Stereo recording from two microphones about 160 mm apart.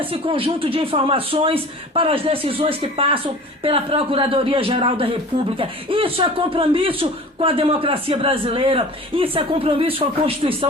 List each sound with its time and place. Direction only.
0.0 s speech: 35° right (ahead or behind)